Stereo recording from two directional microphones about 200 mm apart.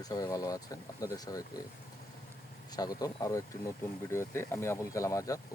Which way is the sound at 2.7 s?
20° left (ahead or behind).